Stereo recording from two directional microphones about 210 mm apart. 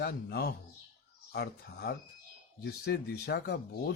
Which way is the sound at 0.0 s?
50° left (ahead or behind).